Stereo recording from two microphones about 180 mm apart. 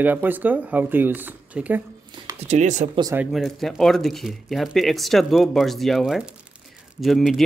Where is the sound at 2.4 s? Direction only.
40° right (ahead or behind).